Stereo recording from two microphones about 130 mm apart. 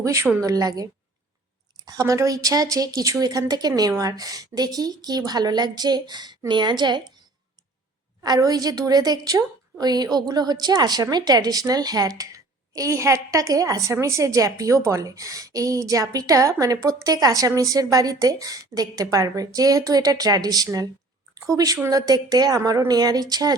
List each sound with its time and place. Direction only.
0.0 s a woman's voice: 25° right (ahead or behind)
8.2 s a woman's voice: 30° right (ahead or behind)